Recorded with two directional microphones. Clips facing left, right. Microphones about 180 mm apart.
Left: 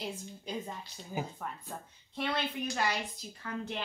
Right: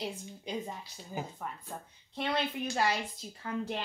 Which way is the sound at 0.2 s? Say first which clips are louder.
Right 1 dB; 15° right (ahead or behind).